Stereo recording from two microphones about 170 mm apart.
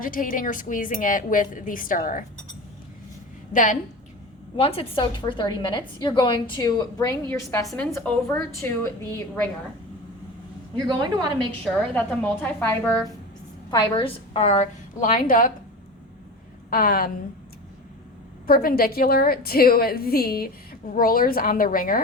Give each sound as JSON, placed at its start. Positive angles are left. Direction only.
{"t": 0.0, "sound": "speech", "side_deg": 55}
{"t": 3.5, "sound": "speech", "side_deg": 50}
{"t": 4.5, "sound": "a woman's voice", "side_deg": 35}
{"t": 10.8, "sound": "a woman's voice", "side_deg": -25}
{"t": 11.6, "sound": "a woman's voice", "side_deg": 10}
{"t": 13.7, "sound": "a woman's voice", "side_deg": 30}
{"t": 16.6, "sound": "a woman's voice", "side_deg": 60}
{"t": 18.4, "sound": "a woman's voice", "side_deg": 60}